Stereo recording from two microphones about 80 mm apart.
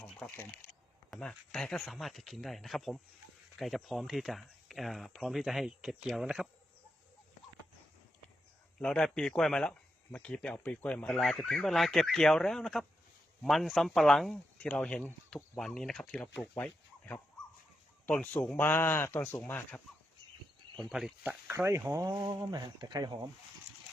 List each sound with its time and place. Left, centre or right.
0.0 s a sound: centre
1.2 s speech: centre
8.8 s speech: centre
11.0 s speech: centre
16.6 s a sound: left
18.5 s speech: left
20.7 s speech: centre
21.5 s speech: right
22.3 s speech: right
22.8 s speech: right